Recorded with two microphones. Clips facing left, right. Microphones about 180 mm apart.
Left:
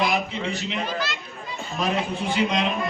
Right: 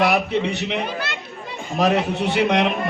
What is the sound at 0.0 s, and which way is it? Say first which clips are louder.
A man's voice: right 6 dB; 70° right (ahead or behind).